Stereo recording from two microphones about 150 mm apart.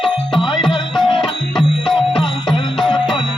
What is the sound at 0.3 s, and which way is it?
Music, 35° left (ahead or behind).